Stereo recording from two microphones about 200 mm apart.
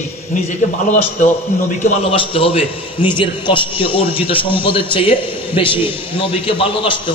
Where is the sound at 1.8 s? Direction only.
30° left (ahead or behind).